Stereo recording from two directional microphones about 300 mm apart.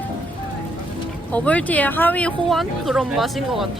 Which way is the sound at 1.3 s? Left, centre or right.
Centre.